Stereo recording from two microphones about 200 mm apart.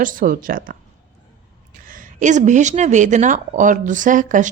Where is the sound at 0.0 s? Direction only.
45° right (ahead or behind).